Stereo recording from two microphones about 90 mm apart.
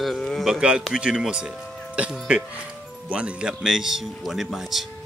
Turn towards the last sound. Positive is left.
turn(degrees=0)  # may be behind; listen again after turning